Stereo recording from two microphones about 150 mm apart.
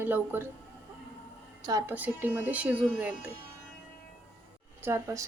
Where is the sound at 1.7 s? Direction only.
25° right (ahead or behind).